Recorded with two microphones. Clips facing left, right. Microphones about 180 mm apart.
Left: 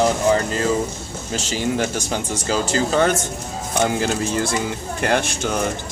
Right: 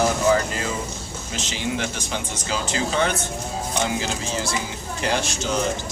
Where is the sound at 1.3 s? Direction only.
40° left (ahead or behind).